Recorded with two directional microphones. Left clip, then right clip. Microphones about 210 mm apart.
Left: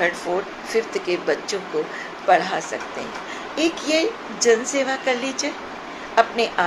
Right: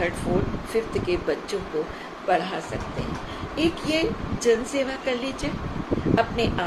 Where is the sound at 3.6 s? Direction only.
15° right (ahead or behind).